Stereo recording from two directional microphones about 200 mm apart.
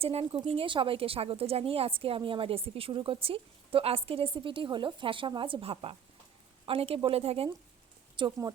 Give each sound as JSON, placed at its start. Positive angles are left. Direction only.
{"t": 0.0, "sound": "speech", "side_deg": -30}